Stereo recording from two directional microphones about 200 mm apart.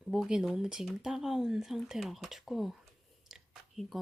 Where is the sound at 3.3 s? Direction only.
Centre (ahead or behind).